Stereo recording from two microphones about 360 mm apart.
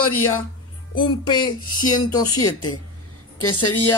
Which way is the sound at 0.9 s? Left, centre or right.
Centre.